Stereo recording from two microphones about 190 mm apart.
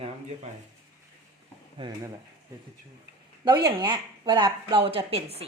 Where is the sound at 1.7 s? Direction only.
25° right (ahead or behind).